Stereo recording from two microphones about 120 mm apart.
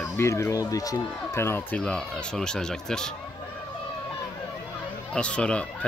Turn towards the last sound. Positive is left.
turn(degrees=10)  # may be behind; listen again after turning